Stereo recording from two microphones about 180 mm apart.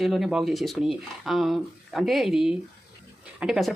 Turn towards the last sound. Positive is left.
turn(degrees=0)  # may be behind; listen again after turning